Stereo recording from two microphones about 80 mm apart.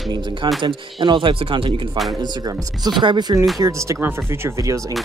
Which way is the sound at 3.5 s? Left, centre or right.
Right.